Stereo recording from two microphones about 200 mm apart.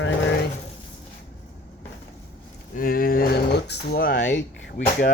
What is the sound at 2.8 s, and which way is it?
Speech, 45° left (ahead or behind).